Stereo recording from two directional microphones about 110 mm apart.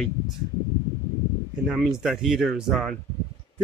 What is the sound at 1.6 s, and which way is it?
Speech, centre (ahead or behind).